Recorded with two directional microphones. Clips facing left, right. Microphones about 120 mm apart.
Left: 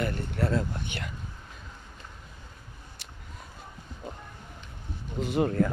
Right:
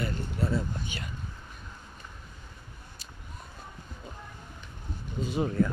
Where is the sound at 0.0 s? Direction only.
65° left (ahead or behind).